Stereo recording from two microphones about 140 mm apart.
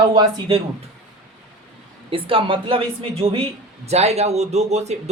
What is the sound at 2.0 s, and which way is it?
A man's voice, 40° right (ahead or behind).